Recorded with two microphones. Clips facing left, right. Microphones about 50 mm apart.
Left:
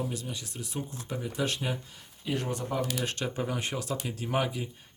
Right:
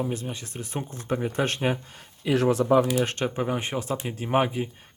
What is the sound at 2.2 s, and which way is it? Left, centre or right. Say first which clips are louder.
Speech: right 10 dB; right.